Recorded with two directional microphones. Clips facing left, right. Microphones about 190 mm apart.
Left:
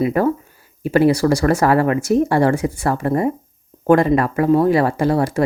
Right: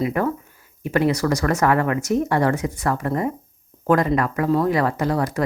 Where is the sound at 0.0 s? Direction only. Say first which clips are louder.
Left 5 dB; 30° left (ahead or behind).